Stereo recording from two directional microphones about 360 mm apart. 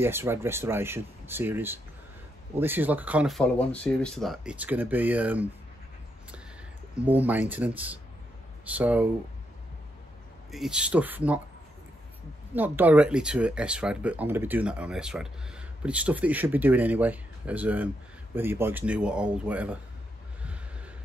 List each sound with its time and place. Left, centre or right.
0.0 s speech: centre
7.1 s speech: centre
10.5 s speech: centre
12.5 s speech: centre